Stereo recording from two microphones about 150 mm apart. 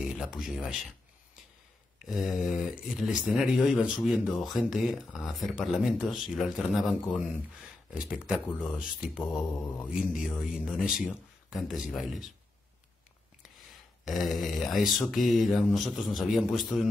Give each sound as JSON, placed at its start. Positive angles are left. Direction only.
{"t": 0.2, "sound": "speech", "side_deg": 0}
{"t": 2.0, "sound": "speech", "side_deg": -5}
{"t": 14.0, "sound": "speech", "side_deg": 0}